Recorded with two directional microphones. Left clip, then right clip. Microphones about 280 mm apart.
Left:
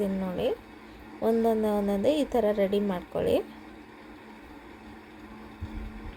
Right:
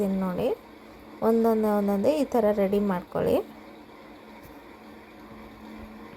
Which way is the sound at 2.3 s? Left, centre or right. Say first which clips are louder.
Right 2 dB; centre.